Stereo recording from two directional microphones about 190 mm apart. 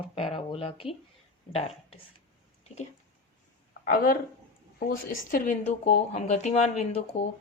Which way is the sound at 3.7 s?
45° left (ahead or behind).